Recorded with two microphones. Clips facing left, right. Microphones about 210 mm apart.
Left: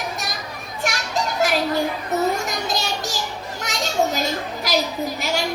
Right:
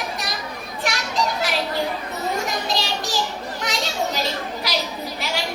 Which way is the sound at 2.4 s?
45° left (ahead or behind).